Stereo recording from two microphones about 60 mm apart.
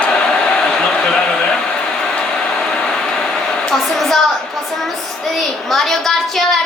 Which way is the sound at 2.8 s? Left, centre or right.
Centre.